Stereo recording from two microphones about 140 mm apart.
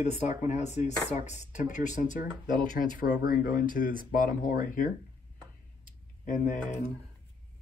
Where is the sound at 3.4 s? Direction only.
80° left.